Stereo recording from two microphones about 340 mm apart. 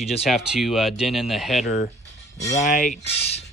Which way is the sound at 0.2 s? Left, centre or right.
Centre.